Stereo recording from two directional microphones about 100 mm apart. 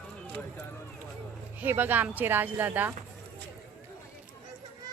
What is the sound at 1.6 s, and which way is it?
Speech, 20° right (ahead or behind).